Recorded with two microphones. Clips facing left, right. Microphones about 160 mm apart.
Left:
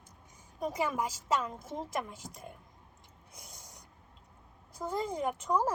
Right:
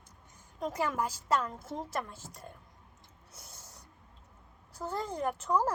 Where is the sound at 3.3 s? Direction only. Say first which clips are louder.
Left 1 dB; 15° left (ahead or behind).